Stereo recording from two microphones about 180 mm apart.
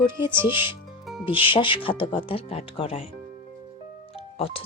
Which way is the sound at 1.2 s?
30° left (ahead or behind).